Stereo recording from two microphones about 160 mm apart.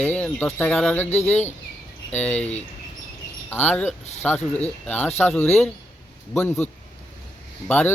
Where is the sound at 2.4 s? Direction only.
45° left (ahead or behind).